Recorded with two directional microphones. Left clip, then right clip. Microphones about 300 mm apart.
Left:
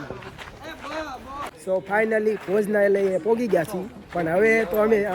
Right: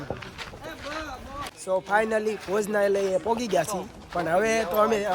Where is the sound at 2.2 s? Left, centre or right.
Right.